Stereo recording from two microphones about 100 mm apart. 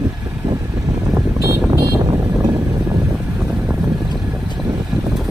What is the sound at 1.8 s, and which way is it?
Vehicle, 55° right (ahead or behind).